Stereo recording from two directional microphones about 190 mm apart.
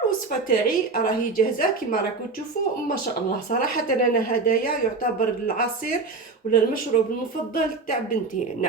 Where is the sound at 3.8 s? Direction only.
45° left (ahead or behind).